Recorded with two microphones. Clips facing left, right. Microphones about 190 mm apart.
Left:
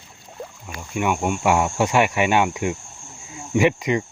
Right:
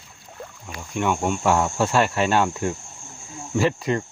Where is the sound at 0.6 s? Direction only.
5° left (ahead or behind).